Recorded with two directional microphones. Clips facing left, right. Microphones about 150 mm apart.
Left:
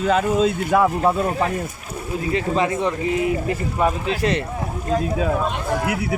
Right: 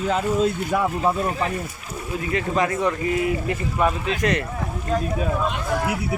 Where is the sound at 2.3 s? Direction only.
25° left (ahead or behind).